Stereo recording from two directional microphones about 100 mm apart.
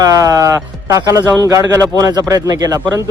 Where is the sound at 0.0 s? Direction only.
35° right (ahead or behind).